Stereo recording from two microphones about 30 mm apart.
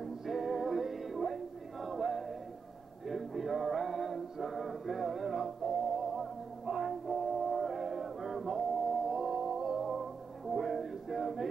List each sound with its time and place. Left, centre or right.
0.0 s music: centre
5.7 s music: centre